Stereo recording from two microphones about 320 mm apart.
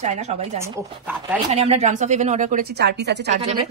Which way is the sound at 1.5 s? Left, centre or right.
Right.